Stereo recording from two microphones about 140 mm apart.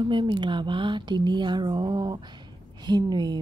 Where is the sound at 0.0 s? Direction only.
35° right (ahead or behind).